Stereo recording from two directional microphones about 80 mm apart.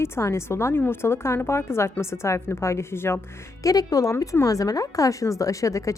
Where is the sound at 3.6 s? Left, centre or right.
Left.